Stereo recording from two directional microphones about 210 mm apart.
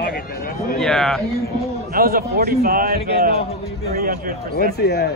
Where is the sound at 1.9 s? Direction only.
45° right (ahead or behind).